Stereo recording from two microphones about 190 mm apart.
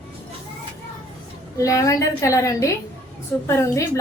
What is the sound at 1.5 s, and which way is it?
A woman's voice, 15° left (ahead or behind).